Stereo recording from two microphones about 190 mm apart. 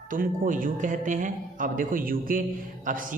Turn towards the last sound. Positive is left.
turn(degrees=-45)  # may be behind; listen again after turning